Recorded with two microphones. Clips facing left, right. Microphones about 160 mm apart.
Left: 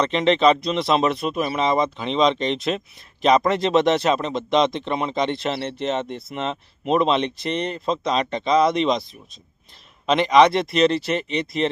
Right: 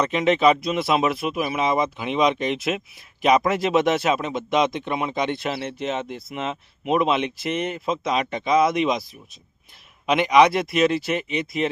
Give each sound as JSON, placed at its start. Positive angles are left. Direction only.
{"t": 0.0, "sound": "speech", "side_deg": -5}
{"t": 10.1, "sound": "speech", "side_deg": -5}